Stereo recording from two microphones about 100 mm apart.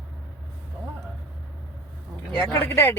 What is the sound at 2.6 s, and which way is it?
Speech, 25° left (ahead or behind).